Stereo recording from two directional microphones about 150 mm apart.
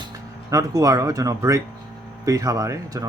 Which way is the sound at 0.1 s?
25° right (ahead or behind).